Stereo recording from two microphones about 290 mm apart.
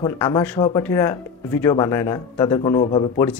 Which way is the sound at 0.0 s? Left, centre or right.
Centre.